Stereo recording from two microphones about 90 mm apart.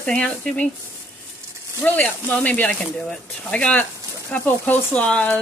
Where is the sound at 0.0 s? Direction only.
10° left (ahead or behind).